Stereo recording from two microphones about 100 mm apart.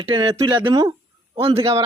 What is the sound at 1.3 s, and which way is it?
Speech, 70° right (ahead or behind).